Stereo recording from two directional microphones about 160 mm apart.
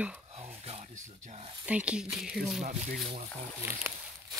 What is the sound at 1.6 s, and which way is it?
Speech, 10° right (ahead or behind).